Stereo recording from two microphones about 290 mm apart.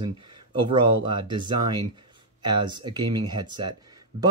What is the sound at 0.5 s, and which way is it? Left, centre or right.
Speech, centre.